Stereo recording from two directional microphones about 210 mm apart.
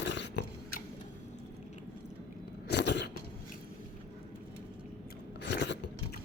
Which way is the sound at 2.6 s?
55° left (ahead or behind).